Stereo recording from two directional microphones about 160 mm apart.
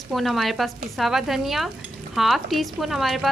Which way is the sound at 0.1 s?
Centre (ahead or behind).